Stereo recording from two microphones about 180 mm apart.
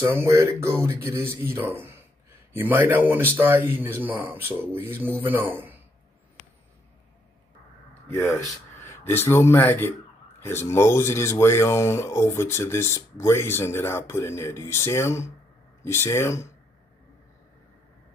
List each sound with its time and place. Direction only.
0.0 s speech: 15° right (ahead or behind)
8.1 s speech: 15° left (ahead or behind)